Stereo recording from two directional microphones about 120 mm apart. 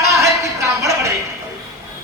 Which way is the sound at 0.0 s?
25° right (ahead or behind).